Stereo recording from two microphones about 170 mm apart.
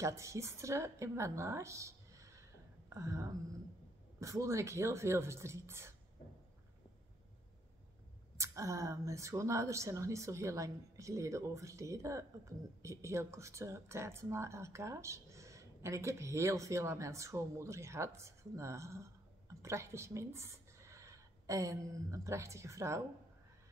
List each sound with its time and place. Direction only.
0.0 s speech: 15° right (ahead or behind)
8.4 s speech: 20° right (ahead or behind)